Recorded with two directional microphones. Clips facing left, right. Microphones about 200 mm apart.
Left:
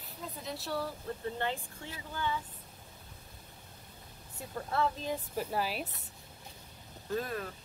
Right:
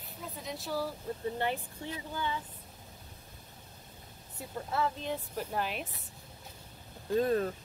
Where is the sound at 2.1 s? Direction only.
15° right (ahead or behind).